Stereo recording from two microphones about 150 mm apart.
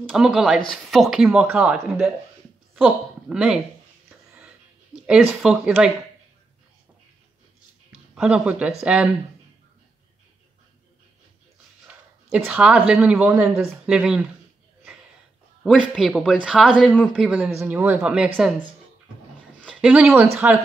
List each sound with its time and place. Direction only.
0.1 s a woman's voice: 5° right (ahead or behind)
5.0 s speech: 5° right (ahead or behind)
8.1 s speech: 5° right (ahead or behind)
11.9 s a sound: 10° right (ahead or behind)
12.3 s speech: 10° right (ahead or behind)
15.9 s speech: centre (ahead or behind)
17.2 s speech: 10° right (ahead or behind)
19.7 s speech: 5° right (ahead or behind)
20.3 s speech: 15° right (ahead or behind)